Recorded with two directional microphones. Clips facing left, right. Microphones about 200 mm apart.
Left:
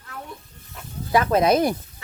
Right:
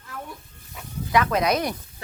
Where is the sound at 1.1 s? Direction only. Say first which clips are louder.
Left 3 dB; 30° left (ahead or behind).